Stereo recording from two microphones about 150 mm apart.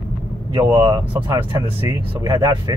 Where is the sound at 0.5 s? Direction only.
30° right (ahead or behind).